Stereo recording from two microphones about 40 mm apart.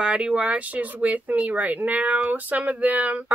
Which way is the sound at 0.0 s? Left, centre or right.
Right.